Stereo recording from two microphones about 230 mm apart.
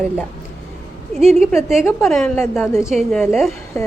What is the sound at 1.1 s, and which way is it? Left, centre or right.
Speech, right.